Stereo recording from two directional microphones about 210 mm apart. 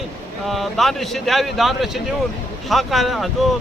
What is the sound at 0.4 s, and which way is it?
Speech, centre (ahead or behind).